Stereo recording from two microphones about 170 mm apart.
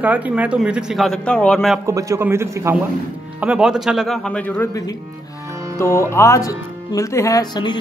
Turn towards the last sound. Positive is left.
turn(degrees=25)  # may be behind; listen again after turning